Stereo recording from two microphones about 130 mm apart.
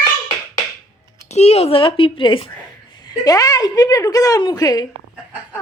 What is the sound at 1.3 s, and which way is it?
A woman's voice, 55° left (ahead or behind).